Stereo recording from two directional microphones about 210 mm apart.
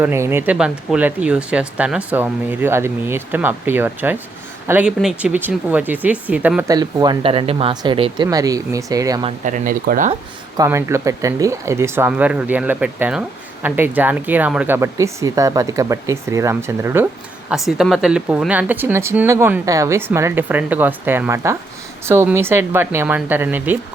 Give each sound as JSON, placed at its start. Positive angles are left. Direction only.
{"t": 0.0, "sound": "speech", "side_deg": -10}
{"t": 6.7, "sound": "speech", "side_deg": -20}
{"t": 9.4, "sound": "speech", "side_deg": -40}
{"t": 10.6, "sound": "speech", "side_deg": -15}